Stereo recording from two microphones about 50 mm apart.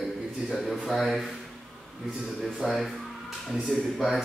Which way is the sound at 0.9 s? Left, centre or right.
Centre.